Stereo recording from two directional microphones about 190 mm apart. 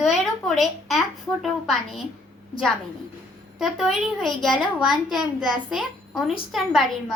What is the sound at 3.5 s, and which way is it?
A child's voice, centre (ahead or behind).